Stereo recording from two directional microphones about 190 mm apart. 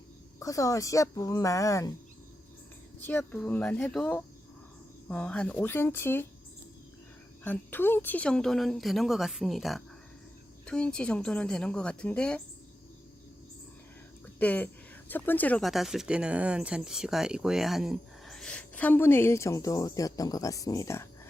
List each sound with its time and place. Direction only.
0.3 s speech: 15° left (ahead or behind)
3.1 s speech: 5° left (ahead or behind)
7.4 s a woman's voice: 10° left (ahead or behind)
14.3 s speech: 10° left (ahead or behind)